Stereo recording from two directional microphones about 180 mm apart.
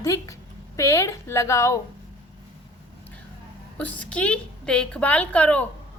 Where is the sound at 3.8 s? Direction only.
10° left (ahead or behind).